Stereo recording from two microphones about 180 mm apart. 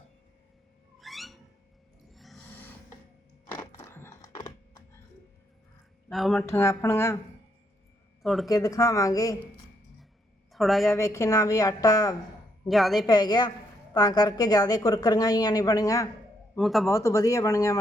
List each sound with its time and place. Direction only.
0.9 s a sound: centre (ahead or behind)
3.5 s a sound: 15° left (ahead or behind)
4.4 s typing: 25° left (ahead or behind)
6.1 s speech: centre (ahead or behind)
6.4 s speech: 15° left (ahead or behind)
8.2 s speech: centre (ahead or behind)
8.4 s speech: 20° left (ahead or behind)
10.5 s speech: centre (ahead or behind)
10.8 s speech: 15° left (ahead or behind)
12.6 s speech: centre (ahead or behind)
13.0 s speech: 20° left (ahead or behind)
16.6 s speech: centre (ahead or behind)
16.9 s speech: 15° left (ahead or behind)